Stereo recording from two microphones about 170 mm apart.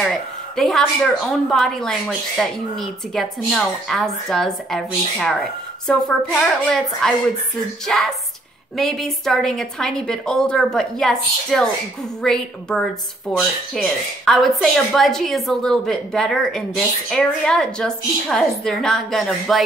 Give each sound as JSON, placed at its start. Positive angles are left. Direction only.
{"t": 0.0, "sound": "speech", "side_deg": 5}